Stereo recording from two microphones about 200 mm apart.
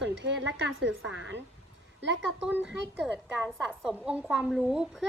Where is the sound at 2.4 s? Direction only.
5° right (ahead or behind).